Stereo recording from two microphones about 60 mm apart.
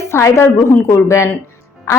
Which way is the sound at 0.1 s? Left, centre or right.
Left.